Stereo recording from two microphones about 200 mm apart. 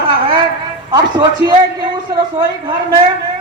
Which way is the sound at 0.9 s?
20° right (ahead or behind).